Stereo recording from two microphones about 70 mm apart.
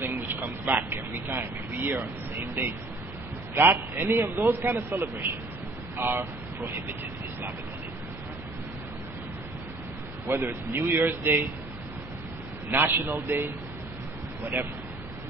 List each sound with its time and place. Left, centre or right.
0.0 s a man's voice: right
10.2 s a man's voice: right
12.7 s a man's voice: right